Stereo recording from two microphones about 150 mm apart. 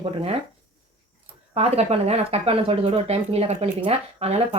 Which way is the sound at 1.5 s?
45° right (ahead or behind).